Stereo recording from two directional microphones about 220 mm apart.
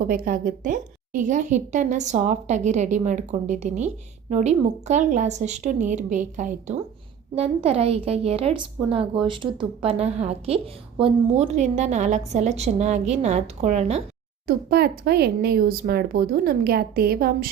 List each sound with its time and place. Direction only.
0.0 s a woman's voice: 40° right (ahead or behind)
14.4 s speech: 45° right (ahead or behind)